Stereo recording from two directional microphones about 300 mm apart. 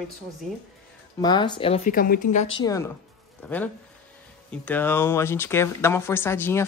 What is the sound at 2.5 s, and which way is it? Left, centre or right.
Speech, centre.